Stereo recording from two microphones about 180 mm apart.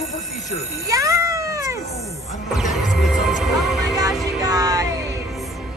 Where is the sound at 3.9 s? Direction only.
20° right (ahead or behind).